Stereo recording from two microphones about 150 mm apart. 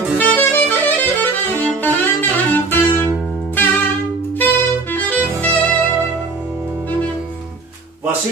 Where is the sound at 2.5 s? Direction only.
15° left (ahead or behind).